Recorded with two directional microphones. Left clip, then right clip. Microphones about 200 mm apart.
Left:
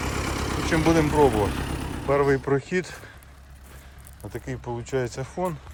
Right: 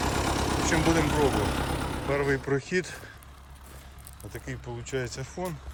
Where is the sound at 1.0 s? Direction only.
50° right (ahead or behind).